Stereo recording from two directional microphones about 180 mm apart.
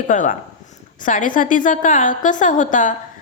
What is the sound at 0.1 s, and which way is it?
A woman's voice, 45° left (ahead or behind).